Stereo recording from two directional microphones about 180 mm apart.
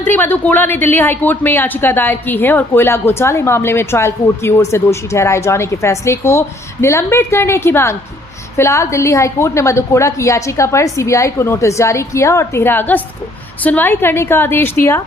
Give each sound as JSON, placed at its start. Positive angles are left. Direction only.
{"t": 0.0, "sound": "a woman's voice", "side_deg": 10}